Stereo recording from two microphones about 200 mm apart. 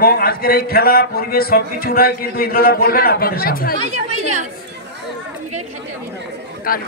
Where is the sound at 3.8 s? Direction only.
35° right (ahead or behind).